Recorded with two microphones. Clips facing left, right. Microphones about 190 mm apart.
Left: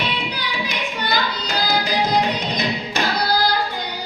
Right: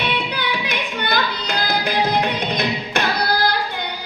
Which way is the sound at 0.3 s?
55° right (ahead or behind).